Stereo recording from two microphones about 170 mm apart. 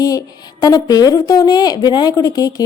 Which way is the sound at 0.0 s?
20° left (ahead or behind).